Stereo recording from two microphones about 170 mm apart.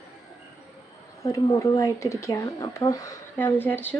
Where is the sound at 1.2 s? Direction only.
20° left (ahead or behind).